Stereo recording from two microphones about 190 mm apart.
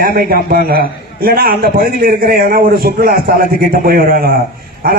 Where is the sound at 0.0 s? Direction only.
50° right (ahead or behind).